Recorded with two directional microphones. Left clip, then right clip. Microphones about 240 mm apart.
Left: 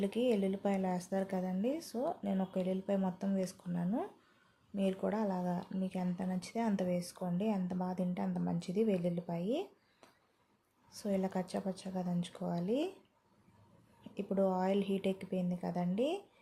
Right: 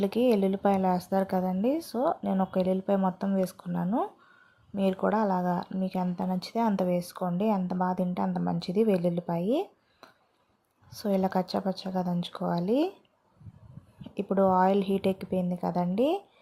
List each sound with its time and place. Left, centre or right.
0.0 s speech: centre
10.9 s speech: centre
14.1 s speech: centre